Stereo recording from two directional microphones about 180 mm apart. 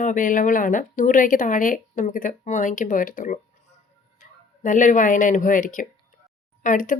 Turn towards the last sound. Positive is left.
turn(degrees=45)  # may be behind; listen again after turning